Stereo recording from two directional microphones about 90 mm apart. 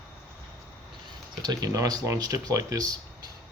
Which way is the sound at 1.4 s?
45° right (ahead or behind).